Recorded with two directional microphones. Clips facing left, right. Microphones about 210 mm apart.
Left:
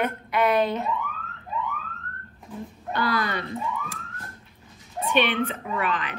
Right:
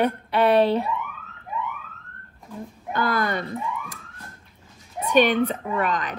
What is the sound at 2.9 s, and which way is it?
Speech, 50° right (ahead or behind).